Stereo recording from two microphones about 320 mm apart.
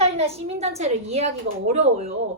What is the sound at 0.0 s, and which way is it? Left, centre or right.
A woman's voice, centre.